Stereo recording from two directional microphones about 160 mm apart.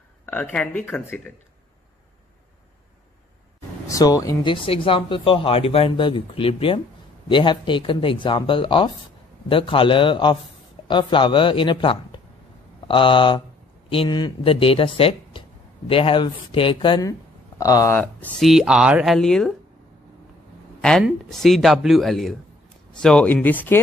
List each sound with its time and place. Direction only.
0.3 s speech: 10° left (ahead or behind)
3.8 s speech: 20° left (ahead or behind)
17.9 s speech: 10° left (ahead or behind)
18.5 s speech: 5° right (ahead or behind)
21.0 s speech: centre (ahead or behind)